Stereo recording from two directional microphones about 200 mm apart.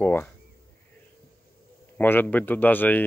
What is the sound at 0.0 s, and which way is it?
Speech, 10° left (ahead or behind).